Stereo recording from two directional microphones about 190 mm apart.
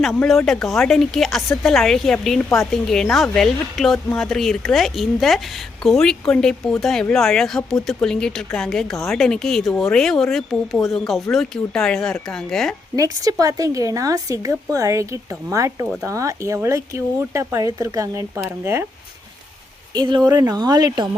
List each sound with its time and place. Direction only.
0.1 s a woman's voice: 5° left (ahead or behind)
13.0 s a woman's voice: 20° right (ahead or behind)
19.9 s speech: 25° right (ahead or behind)